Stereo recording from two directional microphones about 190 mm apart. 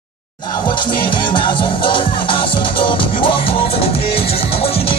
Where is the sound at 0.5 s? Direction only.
25° left (ahead or behind).